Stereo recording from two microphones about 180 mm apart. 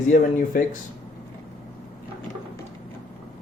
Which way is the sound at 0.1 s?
45° left (ahead or behind).